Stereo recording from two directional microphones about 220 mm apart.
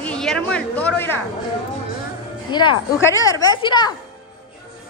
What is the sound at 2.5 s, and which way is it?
A woman's voice, 20° left (ahead or behind).